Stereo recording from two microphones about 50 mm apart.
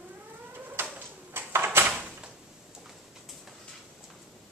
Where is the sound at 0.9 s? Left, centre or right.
Right.